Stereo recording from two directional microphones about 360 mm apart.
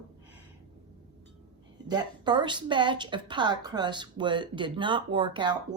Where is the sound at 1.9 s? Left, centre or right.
Centre.